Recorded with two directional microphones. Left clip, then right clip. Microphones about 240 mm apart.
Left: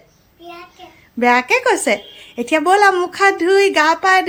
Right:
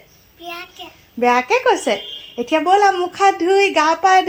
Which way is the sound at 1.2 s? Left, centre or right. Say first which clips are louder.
Left 1 dB; left.